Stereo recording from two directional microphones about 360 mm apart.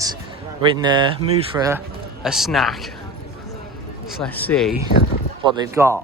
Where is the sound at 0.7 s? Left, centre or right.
Centre.